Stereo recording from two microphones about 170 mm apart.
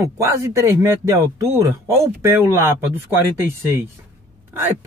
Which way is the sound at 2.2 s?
15° right (ahead or behind).